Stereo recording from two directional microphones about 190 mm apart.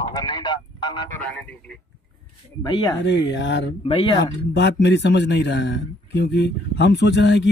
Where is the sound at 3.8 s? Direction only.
25° left (ahead or behind).